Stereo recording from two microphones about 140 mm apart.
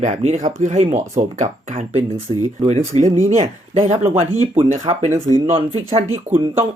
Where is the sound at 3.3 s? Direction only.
50° right (ahead or behind).